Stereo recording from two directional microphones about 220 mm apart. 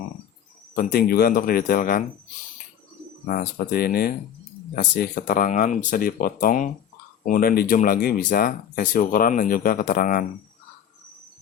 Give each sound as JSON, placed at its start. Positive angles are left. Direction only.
{"t": 0.9, "sound": "speech", "side_deg": 45}
{"t": 3.2, "sound": "speech", "side_deg": 40}